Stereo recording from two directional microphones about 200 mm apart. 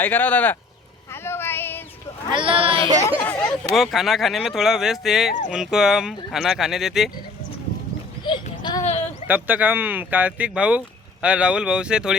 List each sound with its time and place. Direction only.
0.0 s speech: 10° left (ahead or behind)
1.1 s a sound: 10° left (ahead or behind)
2.3 s speech: 25° right (ahead or behind)
3.2 s speech: 10° left (ahead or behind)
8.2 s a sound: 20° left (ahead or behind)
9.2 s speech: 10° right (ahead or behind)